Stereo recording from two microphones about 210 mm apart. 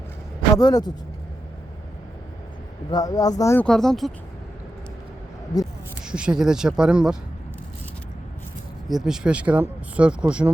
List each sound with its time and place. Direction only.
0.5 s speech: 15° left (ahead or behind)
2.9 s speech: 15° left (ahead or behind); by 4.1 s centre (ahead or behind)
5.5 s speech: 20° left (ahead or behind)
6.1 s speech: 5° right (ahead or behind)
8.9 s speech: centre (ahead or behind)